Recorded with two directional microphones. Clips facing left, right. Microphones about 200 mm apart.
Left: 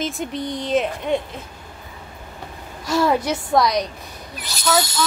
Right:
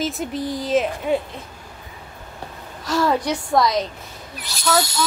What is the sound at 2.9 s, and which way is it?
Speech, 10° left (ahead or behind).